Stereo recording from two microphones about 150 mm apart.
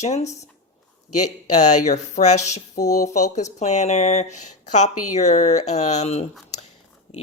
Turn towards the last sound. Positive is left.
turn(degrees=45)  # may be behind; listen again after turning